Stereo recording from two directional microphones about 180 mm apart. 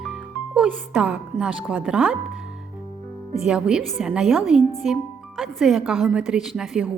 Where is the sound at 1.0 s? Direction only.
5° right (ahead or behind).